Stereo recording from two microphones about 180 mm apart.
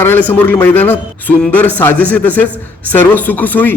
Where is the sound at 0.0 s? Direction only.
10° left (ahead or behind).